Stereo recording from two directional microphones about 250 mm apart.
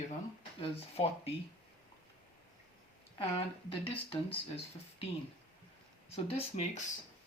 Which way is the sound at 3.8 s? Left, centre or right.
Left.